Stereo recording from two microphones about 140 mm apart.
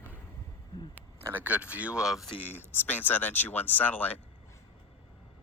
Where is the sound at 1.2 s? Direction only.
10° right (ahead or behind).